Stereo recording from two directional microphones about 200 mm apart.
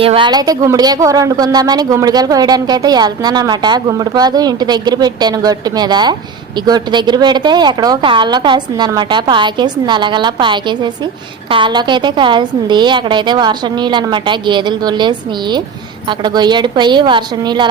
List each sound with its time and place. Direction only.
0.0 s a woman's voice: 25° right (ahead or behind)